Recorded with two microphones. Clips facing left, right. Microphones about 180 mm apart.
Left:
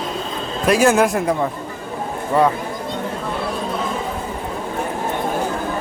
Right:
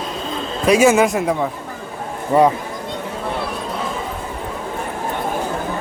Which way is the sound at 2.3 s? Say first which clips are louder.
Right 3 dB; 20° right (ahead or behind).